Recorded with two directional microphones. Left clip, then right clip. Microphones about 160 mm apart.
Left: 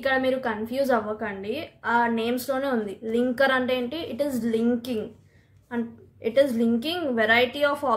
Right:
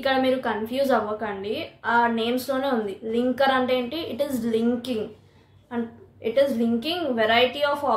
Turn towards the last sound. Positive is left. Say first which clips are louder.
# right 1 dB
turn(degrees=40)  # may be behind; listen again after turning